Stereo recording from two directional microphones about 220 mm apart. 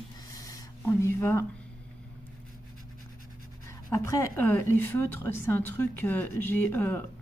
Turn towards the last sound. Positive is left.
turn(degrees=10)  # may be behind; listen again after turning